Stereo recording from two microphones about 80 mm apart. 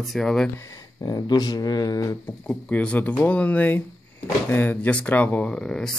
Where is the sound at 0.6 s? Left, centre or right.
Left.